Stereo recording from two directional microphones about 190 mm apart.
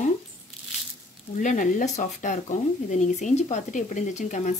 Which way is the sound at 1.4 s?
45° left (ahead or behind).